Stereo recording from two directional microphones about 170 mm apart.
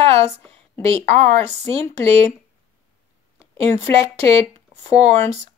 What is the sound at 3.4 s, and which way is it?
Speech, 35° right (ahead or behind).